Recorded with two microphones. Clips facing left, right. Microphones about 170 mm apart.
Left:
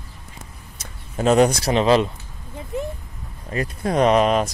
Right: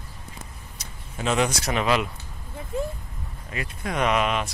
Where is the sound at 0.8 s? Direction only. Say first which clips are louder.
Left 8 dB; 40° left (ahead or behind).